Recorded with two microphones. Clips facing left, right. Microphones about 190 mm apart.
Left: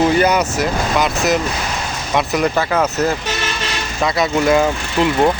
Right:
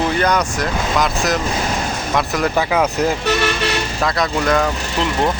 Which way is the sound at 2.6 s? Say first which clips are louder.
Even; 10° right (ahead or behind).